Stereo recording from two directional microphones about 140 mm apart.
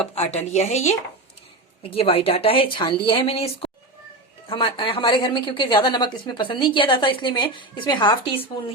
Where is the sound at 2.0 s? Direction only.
40° left (ahead or behind).